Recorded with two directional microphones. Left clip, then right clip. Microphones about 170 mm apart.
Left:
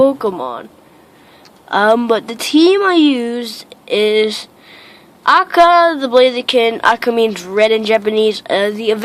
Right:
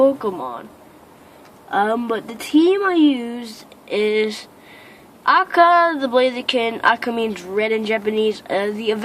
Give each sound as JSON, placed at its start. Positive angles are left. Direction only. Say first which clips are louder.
{"t": 0.0, "sound": "a woman's voice", "louder": "left 4 dB", "side_deg": 35}
{"t": 1.7, "sound": "a woman's voice", "louder": "left 7 dB", "side_deg": 45}